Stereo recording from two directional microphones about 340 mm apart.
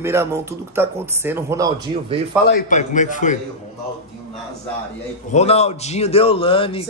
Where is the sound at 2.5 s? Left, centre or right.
Left.